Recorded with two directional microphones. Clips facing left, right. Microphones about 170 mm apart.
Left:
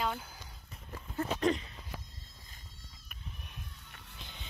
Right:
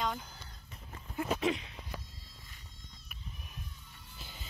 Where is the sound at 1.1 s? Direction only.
5° right (ahead or behind).